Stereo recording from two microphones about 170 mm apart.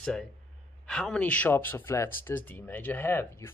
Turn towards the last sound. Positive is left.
turn(degrees=15)  # may be behind; listen again after turning